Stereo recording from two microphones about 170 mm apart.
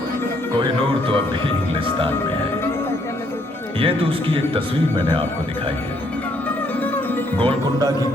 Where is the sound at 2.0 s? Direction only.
15° left (ahead or behind).